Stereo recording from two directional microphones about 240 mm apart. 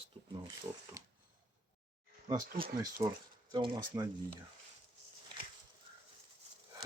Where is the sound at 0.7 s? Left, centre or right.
Centre.